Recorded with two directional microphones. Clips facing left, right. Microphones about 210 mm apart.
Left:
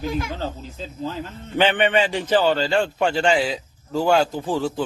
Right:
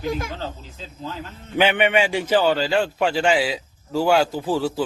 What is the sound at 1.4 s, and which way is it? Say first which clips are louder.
A man's voice: even; 10° right (ahead or behind).